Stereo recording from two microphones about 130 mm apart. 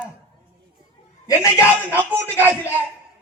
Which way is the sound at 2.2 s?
15° left (ahead or behind).